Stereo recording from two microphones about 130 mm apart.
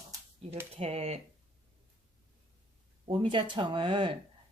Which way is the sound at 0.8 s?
55° right (ahead or behind).